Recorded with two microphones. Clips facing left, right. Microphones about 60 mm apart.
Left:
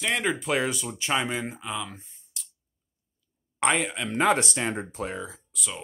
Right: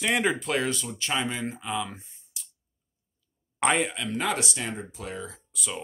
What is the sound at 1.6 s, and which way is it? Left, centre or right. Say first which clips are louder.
Speech: right 2 dB; centre.